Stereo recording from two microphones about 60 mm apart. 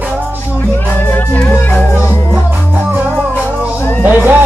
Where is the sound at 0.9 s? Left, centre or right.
Left.